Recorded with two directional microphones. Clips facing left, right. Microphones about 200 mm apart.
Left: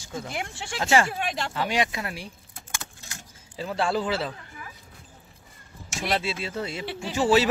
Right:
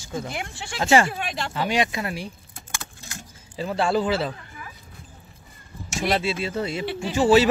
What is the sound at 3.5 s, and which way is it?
Speech, 5° right (ahead or behind).